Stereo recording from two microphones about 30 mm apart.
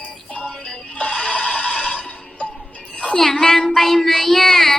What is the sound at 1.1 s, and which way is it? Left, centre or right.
Neigh, left.